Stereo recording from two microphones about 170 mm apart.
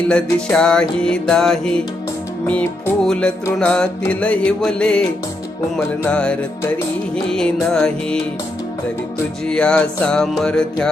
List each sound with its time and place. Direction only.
0.1 s music: 5° left (ahead or behind)
3.0 s music: 5° left (ahead or behind)
9.5 s music: 5° left (ahead or behind)